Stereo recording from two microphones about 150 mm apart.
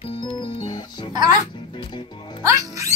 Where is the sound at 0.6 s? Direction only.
30° left (ahead or behind).